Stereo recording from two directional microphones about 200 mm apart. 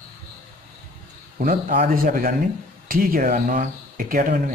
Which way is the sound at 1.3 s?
45° right (ahead or behind).